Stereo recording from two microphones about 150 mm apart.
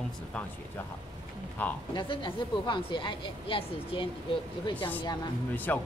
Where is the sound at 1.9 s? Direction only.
30° left (ahead or behind).